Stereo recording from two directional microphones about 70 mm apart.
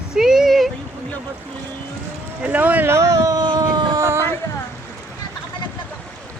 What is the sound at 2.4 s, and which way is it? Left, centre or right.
Speech, right.